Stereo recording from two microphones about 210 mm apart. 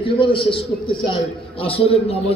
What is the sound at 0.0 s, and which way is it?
A man's voice, 25° left (ahead or behind).